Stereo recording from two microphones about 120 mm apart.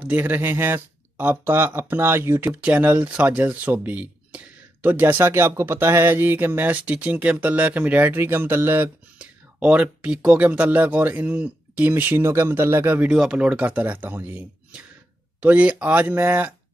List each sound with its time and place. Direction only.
0.0 s speech: 15° right (ahead or behind)